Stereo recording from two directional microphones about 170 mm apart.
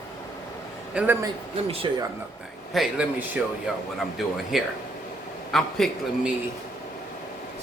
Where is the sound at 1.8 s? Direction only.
30° right (ahead or behind).